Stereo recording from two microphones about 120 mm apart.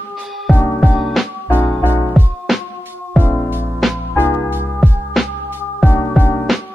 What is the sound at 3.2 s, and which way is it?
Music, 15° right (ahead or behind).